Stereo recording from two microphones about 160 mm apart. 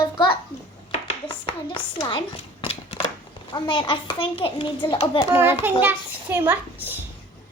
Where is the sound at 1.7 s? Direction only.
30° left (ahead or behind).